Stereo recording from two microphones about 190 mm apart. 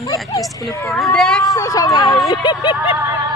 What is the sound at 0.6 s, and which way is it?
Speech, 15° left (ahead or behind).